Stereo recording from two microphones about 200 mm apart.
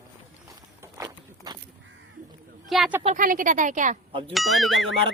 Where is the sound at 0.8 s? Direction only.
20° right (ahead or behind).